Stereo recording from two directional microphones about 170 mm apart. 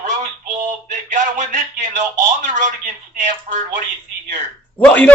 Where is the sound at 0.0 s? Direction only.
50° right (ahead or behind).